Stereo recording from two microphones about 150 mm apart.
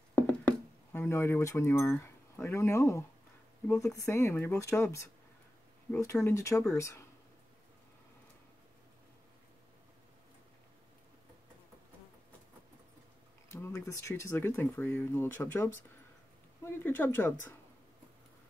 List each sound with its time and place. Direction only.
0.1 s a sound: 10° left (ahead or behind)
3.6 s speech: 20° left (ahead or behind)
13.5 s speech: 20° left (ahead or behind)